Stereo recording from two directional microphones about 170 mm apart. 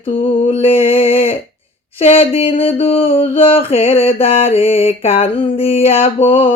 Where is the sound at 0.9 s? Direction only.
35° left (ahead or behind).